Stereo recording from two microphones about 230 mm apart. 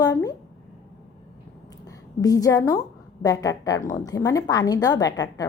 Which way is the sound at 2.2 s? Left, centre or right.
Centre.